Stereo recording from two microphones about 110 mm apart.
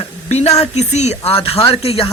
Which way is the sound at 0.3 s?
75° left (ahead or behind).